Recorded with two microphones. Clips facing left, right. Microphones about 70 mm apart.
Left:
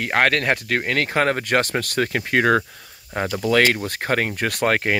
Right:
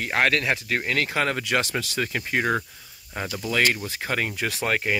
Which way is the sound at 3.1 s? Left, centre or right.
Left.